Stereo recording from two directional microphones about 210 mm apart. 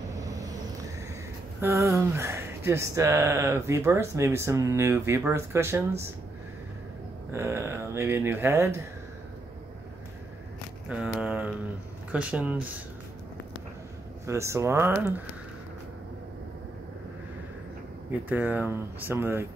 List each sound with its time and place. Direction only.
0.1 s vehicle: 15° right (ahead or behind)
1.6 s speech: 15° right (ahead or behind)
7.3 s speech: 10° right (ahead or behind)
10.9 s a sound: 5° right (ahead or behind)
12.1 s speech: 5° right (ahead or behind)
14.2 s speech: 15° right (ahead or behind)
18.3 s speech: 10° right (ahead or behind)